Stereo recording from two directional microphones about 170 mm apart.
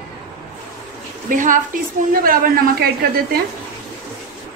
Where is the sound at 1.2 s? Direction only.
50° right (ahead or behind).